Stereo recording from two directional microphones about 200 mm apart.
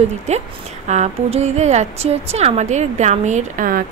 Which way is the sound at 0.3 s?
35° right (ahead or behind).